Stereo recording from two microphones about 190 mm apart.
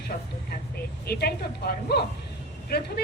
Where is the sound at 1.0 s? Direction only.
55° left (ahead or behind).